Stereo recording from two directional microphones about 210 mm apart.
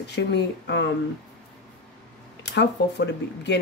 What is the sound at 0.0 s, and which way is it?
Speech, 55° left (ahead or behind).